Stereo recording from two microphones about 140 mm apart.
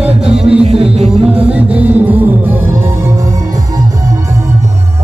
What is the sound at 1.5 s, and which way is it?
Music, 10° right (ahead or behind).